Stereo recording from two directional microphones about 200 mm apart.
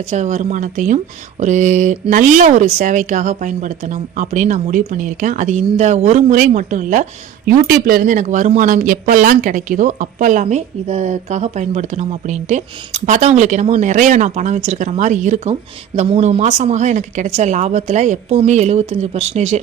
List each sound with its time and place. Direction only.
0.1 s speech: 35° right (ahead or behind)